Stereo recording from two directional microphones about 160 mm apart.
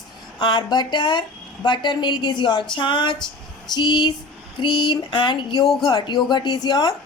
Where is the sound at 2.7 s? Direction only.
30° left (ahead or behind).